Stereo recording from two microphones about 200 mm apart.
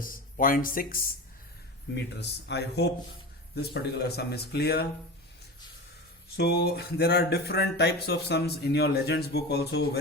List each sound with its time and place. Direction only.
0.0 s speech: 45° left (ahead or behind)
2.1 s speech: 55° left (ahead or behind)
6.3 s speech: 50° left (ahead or behind)